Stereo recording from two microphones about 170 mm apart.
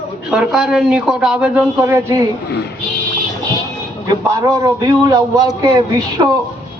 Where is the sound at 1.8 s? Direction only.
15° right (ahead or behind).